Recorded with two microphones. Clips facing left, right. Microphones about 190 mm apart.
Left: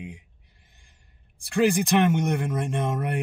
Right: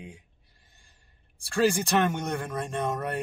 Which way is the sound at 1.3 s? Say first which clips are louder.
Left 3 dB; 15° left (ahead or behind).